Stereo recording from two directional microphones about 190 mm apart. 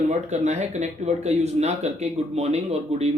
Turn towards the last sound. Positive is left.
turn(degrees=-35)  # may be behind; listen again after turning